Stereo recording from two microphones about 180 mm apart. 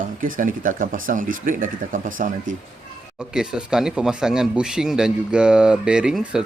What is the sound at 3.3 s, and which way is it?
Speech, 5° right (ahead or behind).